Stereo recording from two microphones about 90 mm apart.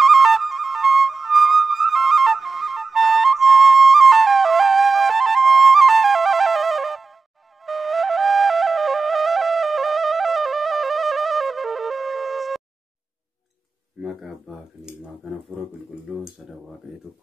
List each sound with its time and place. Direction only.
0.0 s music: centre (ahead or behind)
7.6 s flute: centre (ahead or behind)
14.5 s a sound: 5° right (ahead or behind)
14.9 s speech: 10° right (ahead or behind)